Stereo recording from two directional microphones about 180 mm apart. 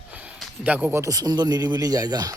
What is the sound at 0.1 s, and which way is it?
Speech, 5° right (ahead or behind).